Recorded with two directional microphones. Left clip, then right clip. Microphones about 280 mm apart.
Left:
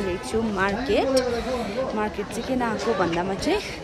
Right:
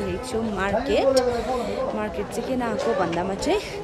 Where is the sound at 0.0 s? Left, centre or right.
Centre.